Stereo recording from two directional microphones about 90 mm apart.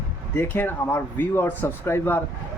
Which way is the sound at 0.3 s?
20° left (ahead or behind).